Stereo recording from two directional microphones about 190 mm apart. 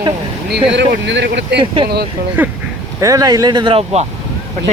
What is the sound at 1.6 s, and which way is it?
Speech, 25° right (ahead or behind).